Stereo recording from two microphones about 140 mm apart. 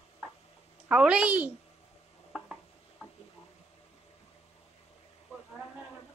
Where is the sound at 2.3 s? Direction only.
5° right (ahead or behind).